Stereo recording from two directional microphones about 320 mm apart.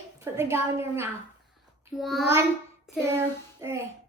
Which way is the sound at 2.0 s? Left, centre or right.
Centre.